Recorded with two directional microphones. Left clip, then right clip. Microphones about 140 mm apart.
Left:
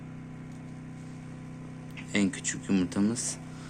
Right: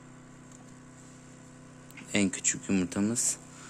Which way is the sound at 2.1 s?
60° right (ahead or behind).